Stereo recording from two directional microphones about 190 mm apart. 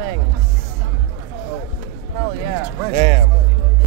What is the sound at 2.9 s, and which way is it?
Speech, 30° right (ahead or behind).